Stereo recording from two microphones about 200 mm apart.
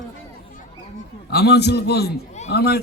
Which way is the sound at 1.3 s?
55° left (ahead or behind).